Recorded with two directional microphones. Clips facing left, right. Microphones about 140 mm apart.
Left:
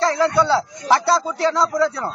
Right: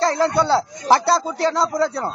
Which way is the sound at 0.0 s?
35° right (ahead or behind).